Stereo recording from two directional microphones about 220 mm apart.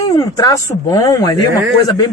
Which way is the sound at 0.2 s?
15° left (ahead or behind).